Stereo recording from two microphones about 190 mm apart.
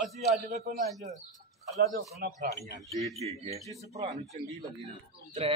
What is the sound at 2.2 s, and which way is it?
Speech, 45° right (ahead or behind).